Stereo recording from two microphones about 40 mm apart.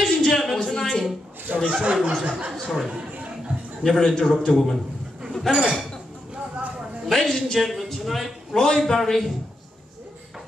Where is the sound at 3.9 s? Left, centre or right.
Centre.